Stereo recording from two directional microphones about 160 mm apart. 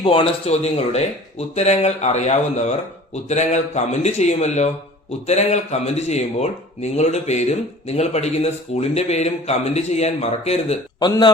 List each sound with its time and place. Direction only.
0.0 s speech: 35° left (ahead or behind)
11.0 s a man's voice: 25° left (ahead or behind)